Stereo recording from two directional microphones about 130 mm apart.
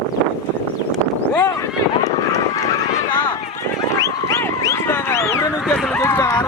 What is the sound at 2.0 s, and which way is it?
Vehicle, 25° left (ahead or behind).